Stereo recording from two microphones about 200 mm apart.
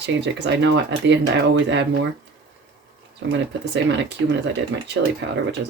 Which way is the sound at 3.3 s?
60° right (ahead or behind).